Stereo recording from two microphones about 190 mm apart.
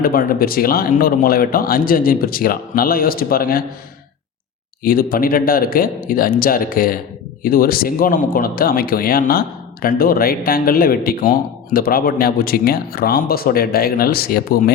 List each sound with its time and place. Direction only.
0.0 s speech: 50° left (ahead or behind)
4.8 s speech: 50° left (ahead or behind)